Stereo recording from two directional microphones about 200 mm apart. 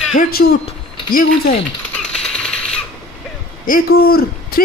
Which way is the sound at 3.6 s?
45° left (ahead or behind).